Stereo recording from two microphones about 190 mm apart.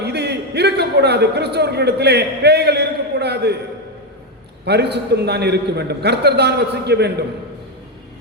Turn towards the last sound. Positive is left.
turn(degrees=-60)  # may be behind; listen again after turning